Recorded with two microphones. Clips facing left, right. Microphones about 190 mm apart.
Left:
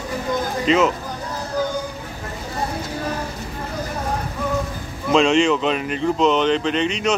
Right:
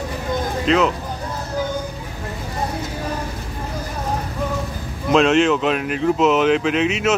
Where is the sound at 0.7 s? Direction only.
Centre (ahead or behind).